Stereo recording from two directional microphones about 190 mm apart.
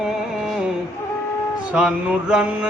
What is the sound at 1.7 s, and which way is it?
Mantra, 5° right (ahead or behind).